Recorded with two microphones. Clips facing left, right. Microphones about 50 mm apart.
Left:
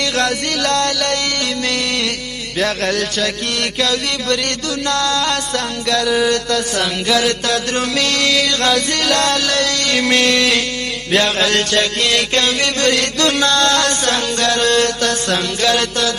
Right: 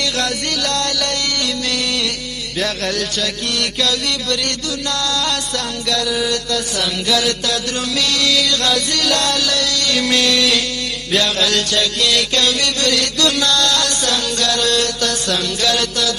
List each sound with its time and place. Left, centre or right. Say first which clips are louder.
0.0 s music: left 3 dB; left
2.6 s music: left 3 dB; left